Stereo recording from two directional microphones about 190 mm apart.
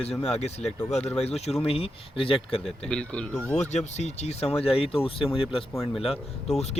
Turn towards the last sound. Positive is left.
turn(degrees=35)  # may be behind; listen again after turning